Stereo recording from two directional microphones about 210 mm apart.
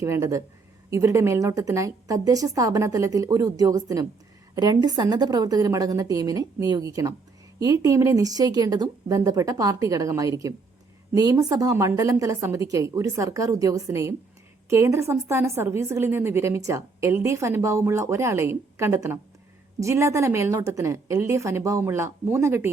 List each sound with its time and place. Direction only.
0.0 s a woman's voice: 15° right (ahead or behind)